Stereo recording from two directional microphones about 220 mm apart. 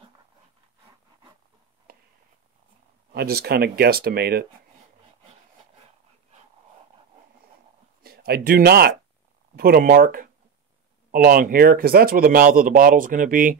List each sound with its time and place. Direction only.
3.1 s speech: 45° right (ahead or behind)
8.0 s speech: 45° right (ahead or behind)